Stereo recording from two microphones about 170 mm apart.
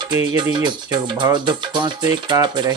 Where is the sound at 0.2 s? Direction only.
20° right (ahead or behind).